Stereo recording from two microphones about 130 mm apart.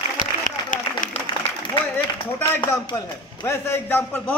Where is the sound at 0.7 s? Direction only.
90° left.